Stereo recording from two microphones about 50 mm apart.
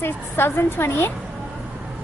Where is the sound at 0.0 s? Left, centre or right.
Left.